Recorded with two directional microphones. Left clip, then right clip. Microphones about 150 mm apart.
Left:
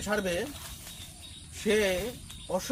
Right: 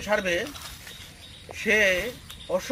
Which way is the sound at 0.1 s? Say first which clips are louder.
Right 6 dB; 20° left (ahead or behind).